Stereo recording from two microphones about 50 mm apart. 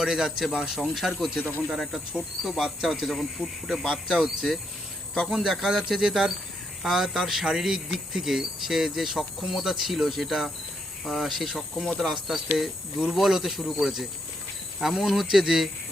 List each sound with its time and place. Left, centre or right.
0.0 s speech: centre
1.4 s speech: left
1.7 s speech: centre
4.1 s speech: centre